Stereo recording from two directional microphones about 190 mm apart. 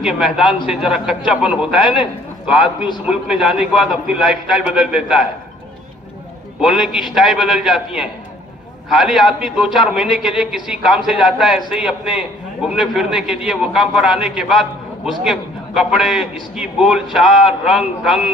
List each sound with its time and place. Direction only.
0.0 s a man's voice: 5° right (ahead or behind)
1.8 s a man's voice: 25° left (ahead or behind)
2.4 s a man's voice: 5° right (ahead or behind)
6.6 s a man's voice: 5° right (ahead or behind)